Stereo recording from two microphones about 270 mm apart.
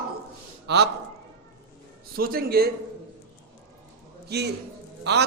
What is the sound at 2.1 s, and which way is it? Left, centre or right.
Speech, right.